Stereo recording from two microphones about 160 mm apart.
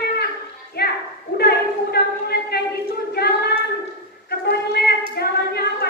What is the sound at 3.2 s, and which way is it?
Hands, 90° left.